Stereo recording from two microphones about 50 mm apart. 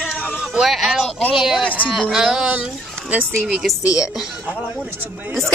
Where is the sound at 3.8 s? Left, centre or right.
Left.